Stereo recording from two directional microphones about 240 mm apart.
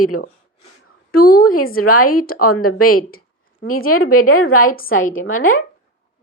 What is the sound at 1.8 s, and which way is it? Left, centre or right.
Speech, left.